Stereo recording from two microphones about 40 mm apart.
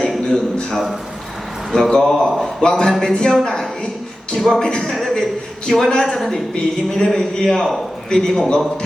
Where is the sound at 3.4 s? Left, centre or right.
Centre.